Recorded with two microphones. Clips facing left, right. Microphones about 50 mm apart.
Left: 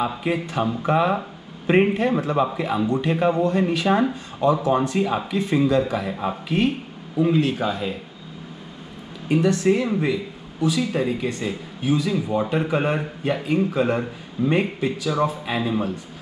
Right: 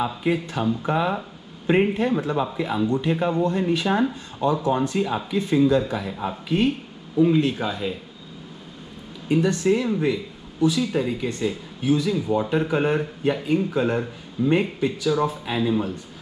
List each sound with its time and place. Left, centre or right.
0.0 s a man's voice: left
7.5 s speech: centre
9.3 s a man's voice: left
9.8 s speech: left